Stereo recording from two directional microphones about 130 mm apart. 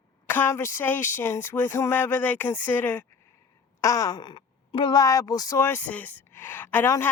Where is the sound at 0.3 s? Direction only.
15° left (ahead or behind).